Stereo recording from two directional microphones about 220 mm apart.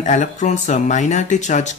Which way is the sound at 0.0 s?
35° left (ahead or behind).